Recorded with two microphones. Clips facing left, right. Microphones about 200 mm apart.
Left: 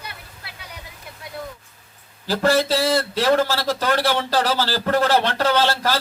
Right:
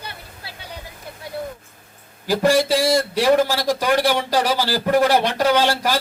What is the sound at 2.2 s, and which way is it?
A man's voice, 15° right (ahead or behind).